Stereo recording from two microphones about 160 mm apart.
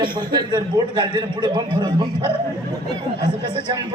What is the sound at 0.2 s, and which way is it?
A man's voice, 30° right (ahead or behind).